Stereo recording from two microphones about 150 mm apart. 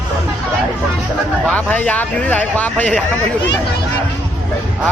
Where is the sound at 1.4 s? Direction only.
10° left (ahead or behind).